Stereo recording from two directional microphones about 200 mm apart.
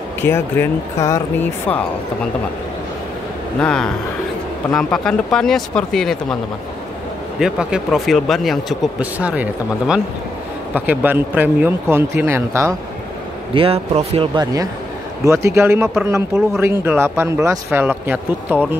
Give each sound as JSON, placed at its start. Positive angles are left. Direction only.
{"t": 0.2, "sound": "speech", "side_deg": 10}
{"t": 3.6, "sound": "speech", "side_deg": 5}
{"t": 7.3, "sound": "speech", "side_deg": -5}
{"t": 13.6, "sound": "speech", "side_deg": -30}